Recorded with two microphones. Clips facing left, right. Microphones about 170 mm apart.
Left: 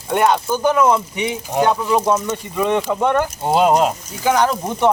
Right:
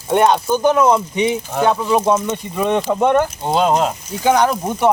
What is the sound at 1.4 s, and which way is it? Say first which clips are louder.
Speech: even; 15° left (ahead or behind).